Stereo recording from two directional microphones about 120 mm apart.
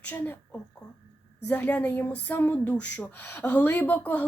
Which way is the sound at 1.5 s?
10° left (ahead or behind).